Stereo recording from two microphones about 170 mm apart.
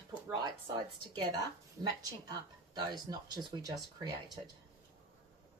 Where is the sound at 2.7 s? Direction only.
25° right (ahead or behind).